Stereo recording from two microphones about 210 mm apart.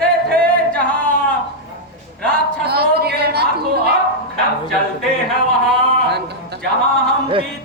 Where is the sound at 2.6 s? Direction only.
50° right (ahead or behind).